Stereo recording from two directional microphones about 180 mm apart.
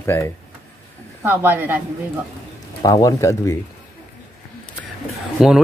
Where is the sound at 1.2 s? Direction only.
10° right (ahead or behind).